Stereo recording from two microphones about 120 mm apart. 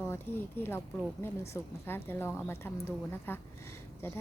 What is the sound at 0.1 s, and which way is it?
A woman's voice, 20° left (ahead or behind).